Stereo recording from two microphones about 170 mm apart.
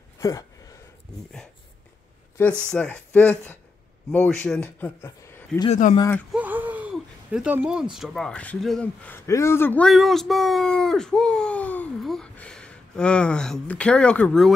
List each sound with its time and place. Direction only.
0.2 s speech: 20° left (ahead or behind)
2.6 s a man's voice: 5° left (ahead or behind)
5.7 s speech: 50° left (ahead or behind)
6.3 s speech: 10° right (ahead or behind); by 14.5 s 5° left (ahead or behind)